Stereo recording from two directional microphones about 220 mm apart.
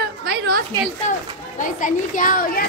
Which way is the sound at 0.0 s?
50° right (ahead or behind).